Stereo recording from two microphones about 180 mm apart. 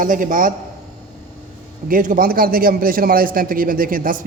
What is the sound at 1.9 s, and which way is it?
Speech, 50° right (ahead or behind).